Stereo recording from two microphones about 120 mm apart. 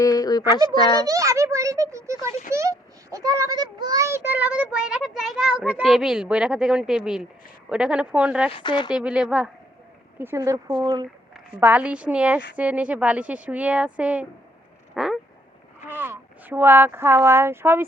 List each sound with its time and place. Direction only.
0.0 s a sound: 30° left (ahead or behind)
0.7 s speech: 35° left (ahead or behind)
1.0 s a child's voice: 30° right (ahead or behind); by 8.5 s 10° right (ahead or behind)
8.5 s speech: 40° left (ahead or behind)
9.0 s a child's voice: 10° right (ahead or behind)
10.2 s speech: 20° right (ahead or behind)
11.6 s a child's voice: 10° right (ahead or behind)
14.9 s cat: 5° right (ahead or behind)
15.9 s speech: 20° right (ahead or behind)